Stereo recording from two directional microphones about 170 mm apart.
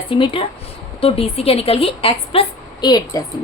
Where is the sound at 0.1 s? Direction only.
30° left (ahead or behind).